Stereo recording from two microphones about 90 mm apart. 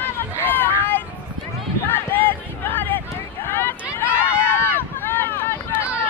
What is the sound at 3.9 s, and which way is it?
Run, 25° left (ahead or behind).